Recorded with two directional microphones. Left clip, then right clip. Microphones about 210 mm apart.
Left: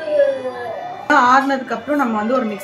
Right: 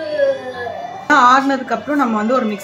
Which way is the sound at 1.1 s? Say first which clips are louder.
Right 2 dB; 15° right (ahead or behind).